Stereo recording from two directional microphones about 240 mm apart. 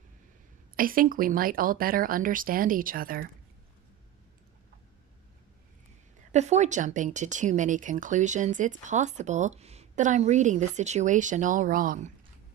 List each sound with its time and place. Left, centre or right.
0.8 s speech: right
6.3 s speech: right